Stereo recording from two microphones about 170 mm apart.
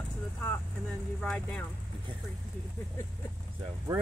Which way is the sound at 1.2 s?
5° left (ahead or behind).